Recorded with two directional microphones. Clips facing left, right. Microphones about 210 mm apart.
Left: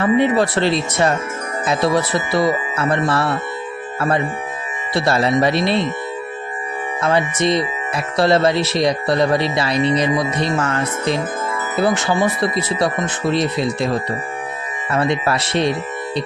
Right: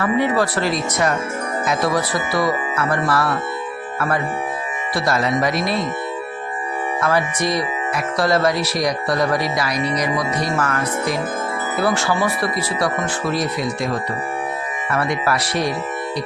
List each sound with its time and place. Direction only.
0.0 s speech: 25° left (ahead or behind)
4.9 s speech: 30° left (ahead or behind)
7.0 s speech: 25° left (ahead or behind)